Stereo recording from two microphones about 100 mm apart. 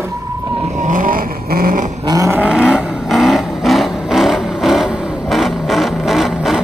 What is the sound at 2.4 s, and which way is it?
Vehicle, 10° right (ahead or behind).